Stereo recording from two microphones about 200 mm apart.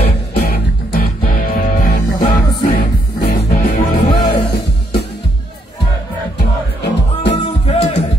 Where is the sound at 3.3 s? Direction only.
45° left (ahead or behind).